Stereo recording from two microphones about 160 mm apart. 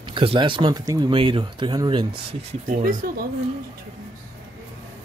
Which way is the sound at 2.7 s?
55° right (ahead or behind).